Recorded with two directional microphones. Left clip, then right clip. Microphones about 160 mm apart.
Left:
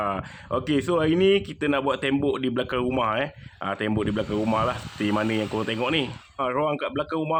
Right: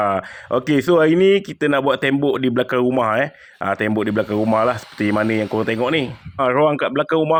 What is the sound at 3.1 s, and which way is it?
Speech, 35° right (ahead or behind).